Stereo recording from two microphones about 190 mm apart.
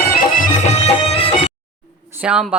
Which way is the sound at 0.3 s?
45° left (ahead or behind).